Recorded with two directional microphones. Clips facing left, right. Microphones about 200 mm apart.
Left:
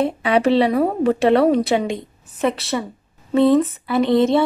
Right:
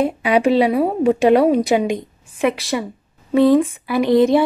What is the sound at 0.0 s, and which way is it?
A woman's voice, 10° right (ahead or behind).